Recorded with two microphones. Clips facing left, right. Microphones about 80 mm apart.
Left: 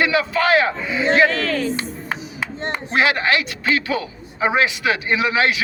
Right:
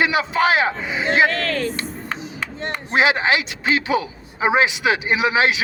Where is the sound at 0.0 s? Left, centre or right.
Right.